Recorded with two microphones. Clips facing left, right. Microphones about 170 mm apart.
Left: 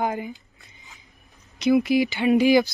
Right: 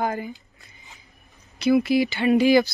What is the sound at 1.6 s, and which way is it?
A woman's voice, 15° left (ahead or behind).